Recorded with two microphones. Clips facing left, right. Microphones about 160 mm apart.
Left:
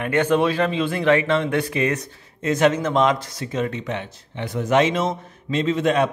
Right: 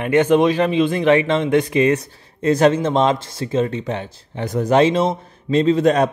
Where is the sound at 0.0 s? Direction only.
15° right (ahead or behind).